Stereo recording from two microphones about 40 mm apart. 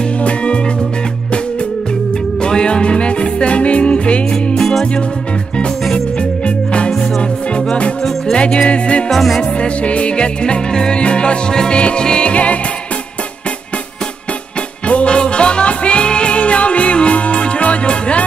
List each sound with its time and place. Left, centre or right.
0.2 s music: left
2.4 s music: left
4.6 s music: centre
5.9 s music: left
8.4 s music: left
9.1 s music: centre
9.4 s music: left
12.3 s music: left
14.9 s music: left